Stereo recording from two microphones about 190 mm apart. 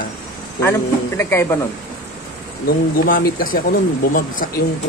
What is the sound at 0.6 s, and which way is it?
Speech, 15° left (ahead or behind).